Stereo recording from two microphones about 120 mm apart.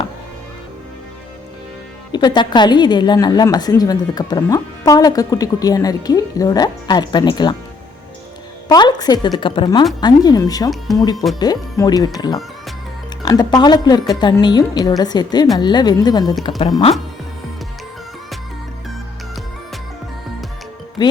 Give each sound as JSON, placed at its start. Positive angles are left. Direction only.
{"t": 2.1, "sound": "a woman's voice", "side_deg": 40}
{"t": 8.7, "sound": "a woman's voice", "side_deg": 35}
{"t": 21.0, "sound": "speech", "side_deg": 35}